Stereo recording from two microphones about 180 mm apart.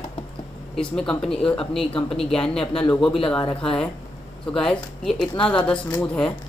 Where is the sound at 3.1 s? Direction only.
30° left (ahead or behind).